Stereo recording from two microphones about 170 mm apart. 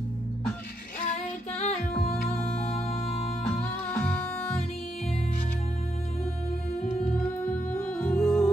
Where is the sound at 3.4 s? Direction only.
10° left (ahead or behind).